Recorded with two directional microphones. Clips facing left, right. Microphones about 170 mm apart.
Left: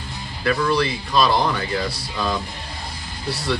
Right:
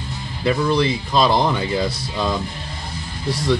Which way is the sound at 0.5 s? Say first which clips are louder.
Right 2 dB; 20° right (ahead or behind).